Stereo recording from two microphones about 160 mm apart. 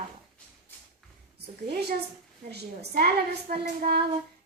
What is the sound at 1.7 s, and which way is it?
Speech, 80° right.